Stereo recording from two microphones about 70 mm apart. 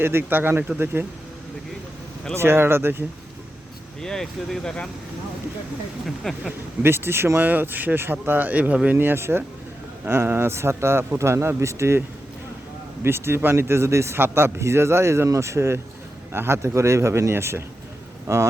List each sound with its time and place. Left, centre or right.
0.0 s a man's voice: right
2.3 s a man's voice: right
4.0 s speech: centre
6.3 s speech: centre
6.8 s speech: right
9.0 s a man's voice: right